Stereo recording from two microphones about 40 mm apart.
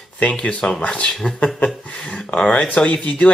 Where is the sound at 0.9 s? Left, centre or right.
Left.